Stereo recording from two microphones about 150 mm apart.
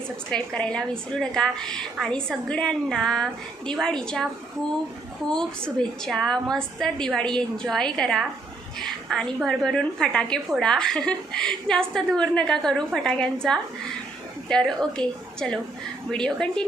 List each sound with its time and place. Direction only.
0.3 s a woman's voice: 5° left (ahead or behind)
5.3 s a woman's voice: 5° left (ahead or behind)